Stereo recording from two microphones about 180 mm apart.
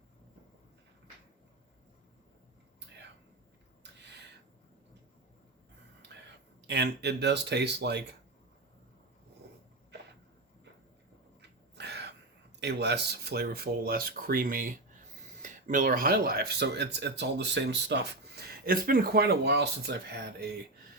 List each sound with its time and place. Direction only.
4.0 s a sound: 75° right (ahead or behind)
6.7 s speech: 70° right (ahead or behind)
11.8 s crow: 70° right (ahead or behind)
12.5 s speech: 70° right (ahead or behind)